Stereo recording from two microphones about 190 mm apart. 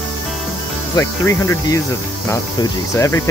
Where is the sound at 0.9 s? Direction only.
15° left (ahead or behind).